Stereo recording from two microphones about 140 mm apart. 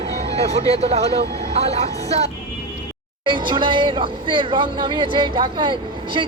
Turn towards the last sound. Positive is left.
turn(degrees=-35)  # may be behind; listen again after turning